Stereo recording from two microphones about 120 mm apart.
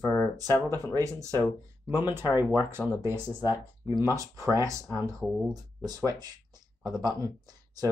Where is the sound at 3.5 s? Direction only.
35° left (ahead or behind).